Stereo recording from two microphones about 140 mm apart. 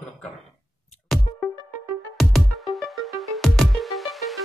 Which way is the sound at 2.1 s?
Centre (ahead or behind).